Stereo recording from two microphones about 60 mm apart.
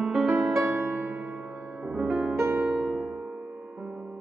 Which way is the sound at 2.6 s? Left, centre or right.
Centre.